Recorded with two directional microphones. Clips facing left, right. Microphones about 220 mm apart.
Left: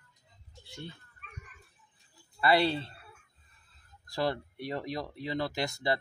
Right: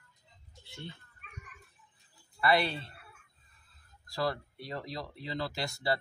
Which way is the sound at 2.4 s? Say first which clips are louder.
Left 3 dB; 30° left (ahead or behind).